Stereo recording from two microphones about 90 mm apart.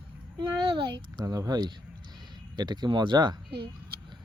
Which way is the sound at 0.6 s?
65° right (ahead or behind).